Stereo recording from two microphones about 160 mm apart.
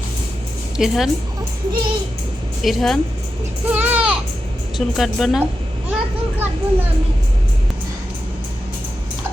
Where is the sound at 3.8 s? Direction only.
10° right (ahead or behind).